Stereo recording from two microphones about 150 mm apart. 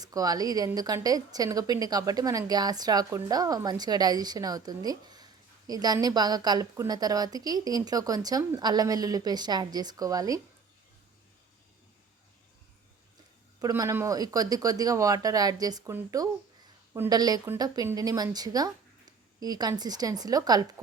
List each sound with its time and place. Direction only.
0.0 s speech: 25° right (ahead or behind)
13.6 s speech: 25° right (ahead or behind)